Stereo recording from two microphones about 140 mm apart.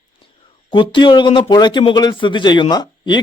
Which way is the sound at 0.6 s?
35° left (ahead or behind).